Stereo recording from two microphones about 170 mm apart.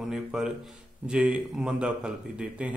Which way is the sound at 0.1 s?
5° right (ahead or behind).